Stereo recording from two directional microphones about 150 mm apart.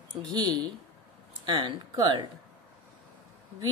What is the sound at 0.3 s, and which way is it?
Speech, 30° right (ahead or behind).